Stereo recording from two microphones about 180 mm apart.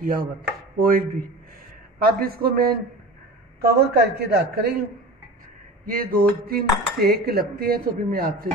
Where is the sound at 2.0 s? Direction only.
55° right (ahead or behind).